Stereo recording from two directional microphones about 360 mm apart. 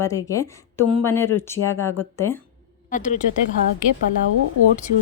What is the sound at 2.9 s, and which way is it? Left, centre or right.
Speech, left.